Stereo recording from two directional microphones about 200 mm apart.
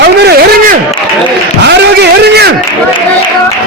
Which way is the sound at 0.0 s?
50° right (ahead or behind).